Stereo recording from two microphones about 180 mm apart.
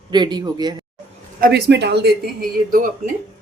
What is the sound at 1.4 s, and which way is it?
Speech, 60° right (ahead or behind).